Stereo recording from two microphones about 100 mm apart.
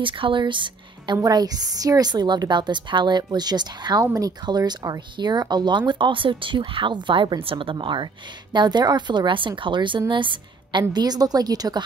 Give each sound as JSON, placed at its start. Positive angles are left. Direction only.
{"t": 0.0, "sound": "speech", "side_deg": -55}